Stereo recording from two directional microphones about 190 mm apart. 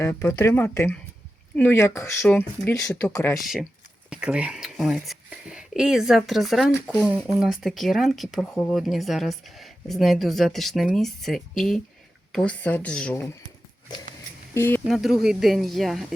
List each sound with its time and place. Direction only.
0.0 s speech: 15° left (ahead or behind)
3.4 s speech: centre (ahead or behind)
14.5 s speech: 15° left (ahead or behind)
14.8 s speech: centre (ahead or behind)